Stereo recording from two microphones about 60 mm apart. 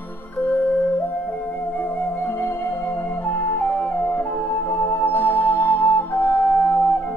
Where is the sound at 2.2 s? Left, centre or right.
Left.